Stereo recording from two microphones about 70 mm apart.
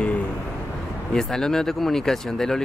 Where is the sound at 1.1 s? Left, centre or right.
Centre.